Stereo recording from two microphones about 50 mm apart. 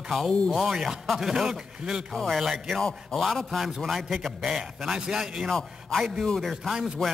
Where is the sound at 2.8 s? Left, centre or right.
Centre.